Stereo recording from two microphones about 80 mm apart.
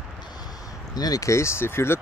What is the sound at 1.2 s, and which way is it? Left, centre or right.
Speech, left.